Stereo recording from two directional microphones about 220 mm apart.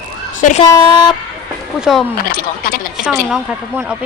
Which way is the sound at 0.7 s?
20° left (ahead or behind).